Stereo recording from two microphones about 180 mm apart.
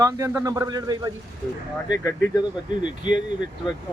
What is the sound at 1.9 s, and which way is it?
Speech, 20° left (ahead or behind).